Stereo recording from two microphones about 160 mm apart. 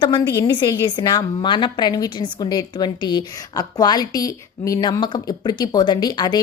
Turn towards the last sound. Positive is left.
turn(degrees=25)  # may be behind; listen again after turning